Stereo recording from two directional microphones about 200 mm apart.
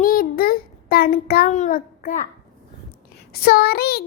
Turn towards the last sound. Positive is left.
turn(degrees=50)  # may be behind; listen again after turning